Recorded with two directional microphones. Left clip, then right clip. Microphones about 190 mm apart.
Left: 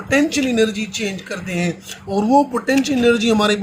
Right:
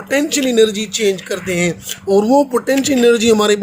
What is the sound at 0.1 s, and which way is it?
Speech, 50° right (ahead or behind).